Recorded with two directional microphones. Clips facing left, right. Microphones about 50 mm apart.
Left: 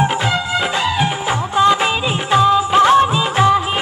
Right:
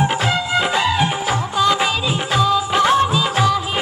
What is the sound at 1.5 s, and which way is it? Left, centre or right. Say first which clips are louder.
Music: left 4 dB; left.